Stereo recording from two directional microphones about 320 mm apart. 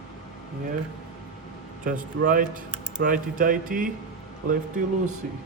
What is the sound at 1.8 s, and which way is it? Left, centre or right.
A man's voice, right.